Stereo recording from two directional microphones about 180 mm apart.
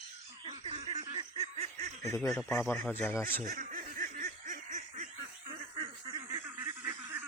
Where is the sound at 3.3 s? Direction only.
50° right (ahead or behind).